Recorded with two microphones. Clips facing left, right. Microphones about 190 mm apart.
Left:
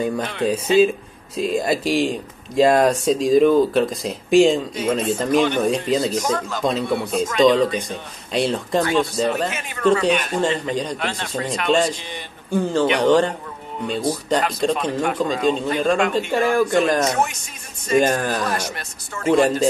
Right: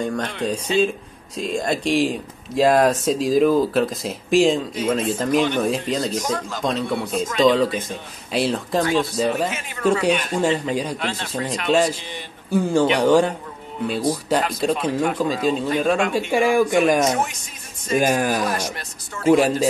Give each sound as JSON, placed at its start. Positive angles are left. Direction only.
{"t": 0.0, "sound": "speech", "side_deg": 5}
{"t": 14.3, "sound": "speech", "side_deg": -5}